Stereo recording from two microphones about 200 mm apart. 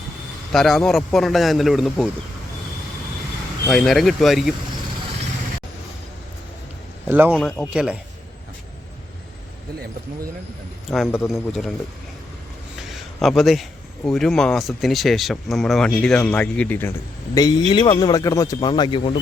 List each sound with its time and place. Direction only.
0.5 s speech: centre (ahead or behind)
3.7 s speech: centre (ahead or behind)
7.1 s speech: 10° right (ahead or behind)
10.8 s speech: centre (ahead or behind)
12.8 s a sound: centre (ahead or behind)
13.2 s speech: centre (ahead or behind)
17.3 s speech: 20° left (ahead or behind)